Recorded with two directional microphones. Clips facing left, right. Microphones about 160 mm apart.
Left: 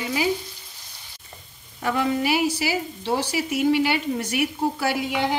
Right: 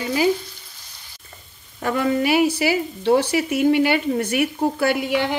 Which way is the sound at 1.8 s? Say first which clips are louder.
Right 3 dB; 50° right (ahead or behind).